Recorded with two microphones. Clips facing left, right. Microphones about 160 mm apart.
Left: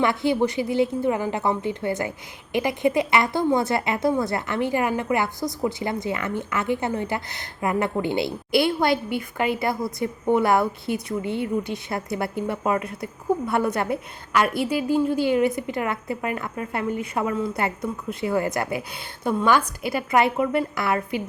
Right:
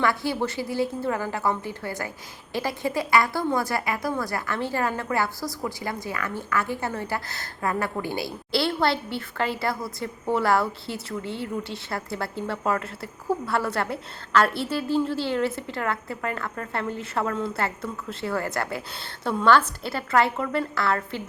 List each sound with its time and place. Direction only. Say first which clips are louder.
0.0 s a woman's voice: left 4 dB; 20° left (ahead or behind)